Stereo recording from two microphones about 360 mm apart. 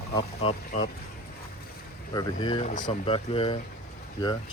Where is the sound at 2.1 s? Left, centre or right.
Centre.